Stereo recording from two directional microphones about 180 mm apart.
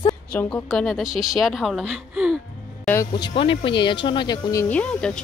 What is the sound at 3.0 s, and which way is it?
Speech, 25° left (ahead or behind).